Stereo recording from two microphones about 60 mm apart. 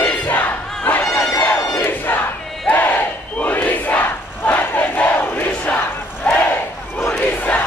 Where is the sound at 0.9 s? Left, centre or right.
Left.